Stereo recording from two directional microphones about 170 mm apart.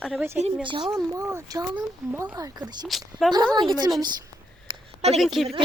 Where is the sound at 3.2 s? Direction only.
Centre (ahead or behind).